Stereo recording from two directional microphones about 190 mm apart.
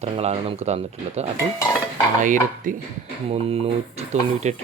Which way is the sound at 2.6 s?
45° right (ahead or behind).